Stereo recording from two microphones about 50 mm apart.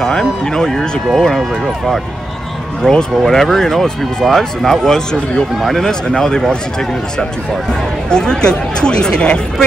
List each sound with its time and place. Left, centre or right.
0.0 s speech: centre
2.8 s speech: centre